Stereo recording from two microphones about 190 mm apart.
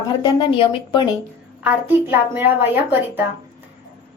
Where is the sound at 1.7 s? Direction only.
10° right (ahead or behind).